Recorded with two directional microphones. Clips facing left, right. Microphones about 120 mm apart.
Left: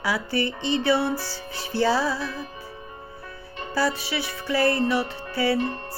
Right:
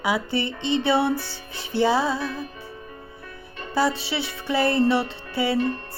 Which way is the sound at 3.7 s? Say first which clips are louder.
Right 2 dB; 25° right (ahead or behind).